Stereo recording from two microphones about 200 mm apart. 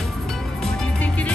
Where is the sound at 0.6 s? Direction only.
5° left (ahead or behind).